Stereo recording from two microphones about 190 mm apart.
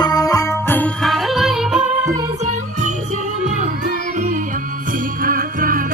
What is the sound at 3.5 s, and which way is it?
Music, 40° right (ahead or behind).